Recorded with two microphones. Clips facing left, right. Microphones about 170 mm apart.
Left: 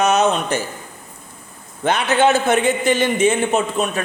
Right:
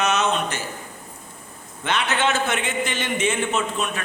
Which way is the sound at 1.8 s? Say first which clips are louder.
Left 7 dB; 40° left (ahead or behind).